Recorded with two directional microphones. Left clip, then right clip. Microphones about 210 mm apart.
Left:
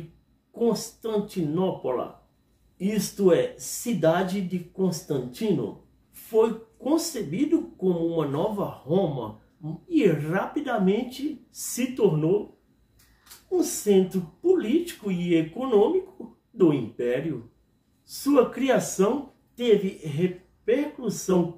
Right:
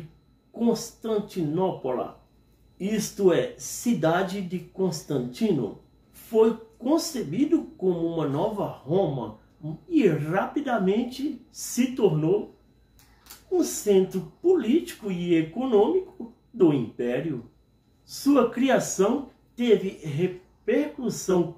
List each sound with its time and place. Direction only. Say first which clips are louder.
0.6 s a woman's voice: left 1 dB; 10° left (ahead or behind)
13.5 s a woman's voice: even; 10° left (ahead or behind)